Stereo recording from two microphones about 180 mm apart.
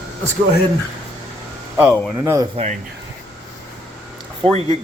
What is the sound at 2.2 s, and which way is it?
Speech, 20° right (ahead or behind).